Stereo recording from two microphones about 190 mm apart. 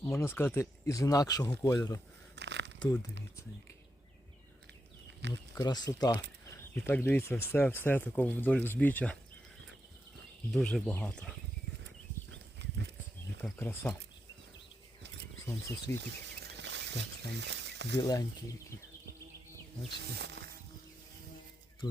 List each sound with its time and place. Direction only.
0.0 s speech: 15° left (ahead or behind)
2.3 s a sound: 65° right (ahead or behind)
2.8 s speech: 20° left (ahead or behind)
5.2 s music: 65° right (ahead or behind)
5.5 s speech: 20° left (ahead or behind)
6.7 s speech: 10° left (ahead or behind)
10.5 s speech: 5° left (ahead or behind)
12.3 s livestock: 65° right (ahead or behind)
13.4 s speech: 10° left (ahead or behind)
15.9 s speech: 15° left (ahead or behind)
16.2 s a sound: 65° right (ahead or behind)
17.9 s speech: 20° left (ahead or behind)
20.1 s music: 65° right (ahead or behind)